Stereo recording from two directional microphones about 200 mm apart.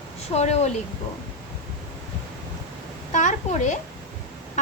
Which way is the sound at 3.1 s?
35° left (ahead or behind).